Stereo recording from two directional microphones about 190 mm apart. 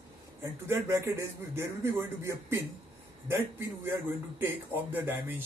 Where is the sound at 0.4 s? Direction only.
15° right (ahead or behind).